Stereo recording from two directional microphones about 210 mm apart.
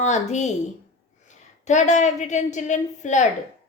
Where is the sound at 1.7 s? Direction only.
35° left (ahead or behind).